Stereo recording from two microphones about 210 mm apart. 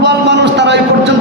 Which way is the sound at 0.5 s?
55° right (ahead or behind).